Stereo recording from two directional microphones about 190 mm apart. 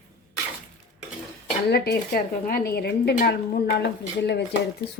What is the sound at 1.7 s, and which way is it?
A woman's voice, 55° left (ahead or behind).